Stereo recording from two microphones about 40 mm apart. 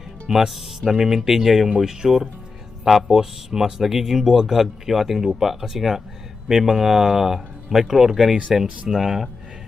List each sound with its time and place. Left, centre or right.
0.3 s speech: centre
8.6 s speech: right
8.9 s speech: centre